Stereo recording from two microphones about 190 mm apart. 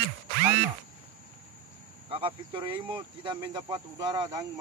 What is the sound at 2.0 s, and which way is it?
Speech, 25° right (ahead or behind).